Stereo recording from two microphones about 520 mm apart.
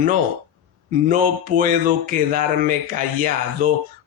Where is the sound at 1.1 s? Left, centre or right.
Centre.